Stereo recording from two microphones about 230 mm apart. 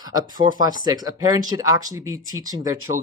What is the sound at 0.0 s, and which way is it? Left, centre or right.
Speech, centre.